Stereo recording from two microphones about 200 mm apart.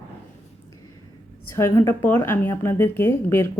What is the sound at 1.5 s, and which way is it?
A woman's voice, 15° left (ahead or behind).